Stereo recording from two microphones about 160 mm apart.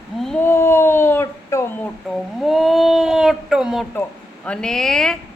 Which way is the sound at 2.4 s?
Centre (ahead or behind).